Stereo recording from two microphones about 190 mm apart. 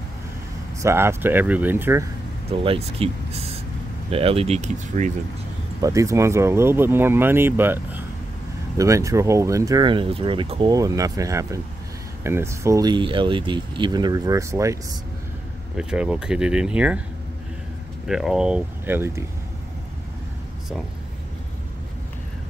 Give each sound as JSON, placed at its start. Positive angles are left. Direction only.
{"t": 0.8, "sound": "speech", "side_deg": -15}
{"t": 2.5, "sound": "speech", "side_deg": -30}
{"t": 5.8, "sound": "speech", "side_deg": -15}
{"t": 15.8, "sound": "speech", "side_deg": -5}
{"t": 18.0, "sound": "speech", "side_deg": 0}